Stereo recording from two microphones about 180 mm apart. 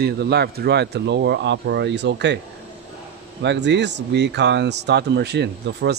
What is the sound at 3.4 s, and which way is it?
Speech, 75° right (ahead or behind).